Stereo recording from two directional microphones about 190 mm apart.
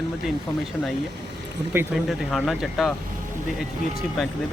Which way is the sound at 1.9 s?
Centre (ahead or behind).